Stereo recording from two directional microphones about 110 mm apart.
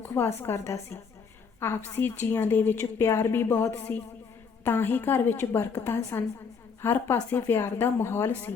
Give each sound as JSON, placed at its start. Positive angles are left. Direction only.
{"t": 0.0, "sound": "a woman's voice", "side_deg": 20}